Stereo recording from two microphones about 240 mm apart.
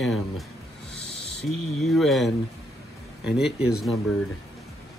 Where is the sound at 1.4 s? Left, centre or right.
Centre.